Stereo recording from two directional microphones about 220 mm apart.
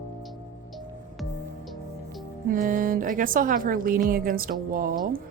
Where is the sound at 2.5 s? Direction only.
40° right (ahead or behind).